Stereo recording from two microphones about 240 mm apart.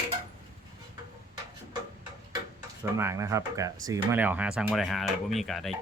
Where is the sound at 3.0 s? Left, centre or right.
Centre.